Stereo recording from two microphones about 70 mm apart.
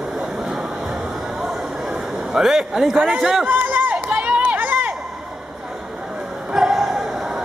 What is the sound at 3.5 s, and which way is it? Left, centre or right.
Run, right.